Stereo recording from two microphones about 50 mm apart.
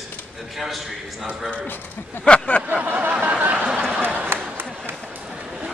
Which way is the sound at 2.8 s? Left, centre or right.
Right.